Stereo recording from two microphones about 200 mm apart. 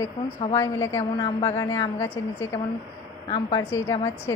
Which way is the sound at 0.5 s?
15° left (ahead or behind).